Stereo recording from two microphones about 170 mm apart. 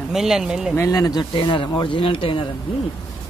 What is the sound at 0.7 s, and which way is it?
Speech, 15° left (ahead or behind).